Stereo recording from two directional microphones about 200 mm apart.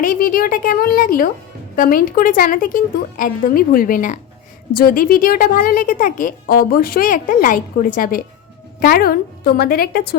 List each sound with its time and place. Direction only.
0.0 s speech: 45° left (ahead or behind)